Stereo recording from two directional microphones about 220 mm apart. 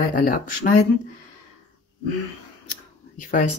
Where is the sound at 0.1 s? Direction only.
40° left (ahead or behind).